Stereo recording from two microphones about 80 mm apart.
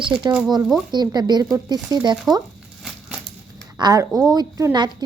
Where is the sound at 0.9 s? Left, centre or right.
Right.